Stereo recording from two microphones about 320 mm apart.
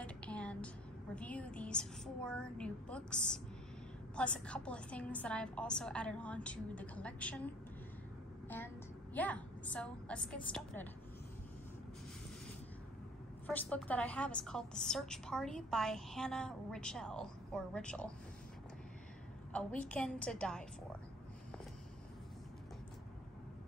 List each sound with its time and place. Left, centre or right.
0.0 s music: centre
1.1 s a woman's voice: centre
13.5 s a woman's voice: centre
19.5 s a woman's voice: centre